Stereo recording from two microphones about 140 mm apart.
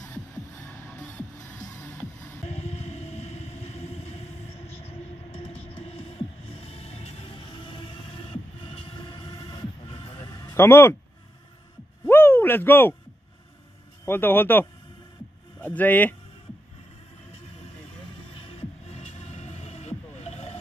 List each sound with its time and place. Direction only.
0.6 s music: 20° left (ahead or behind)
2.4 s vehicle: 50° left (ahead or behind)
10.5 s speech: 15° left (ahead or behind)
12.1 s a sound: 15° left (ahead or behind)
14.0 s speech: 15° left (ahead or behind)
18.3 s music: 40° left (ahead or behind)